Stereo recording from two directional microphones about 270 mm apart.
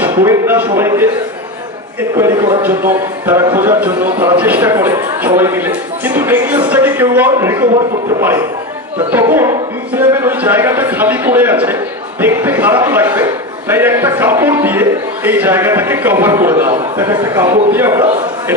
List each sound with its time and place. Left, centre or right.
0.0 s speech: centre
2.1 s speech: centre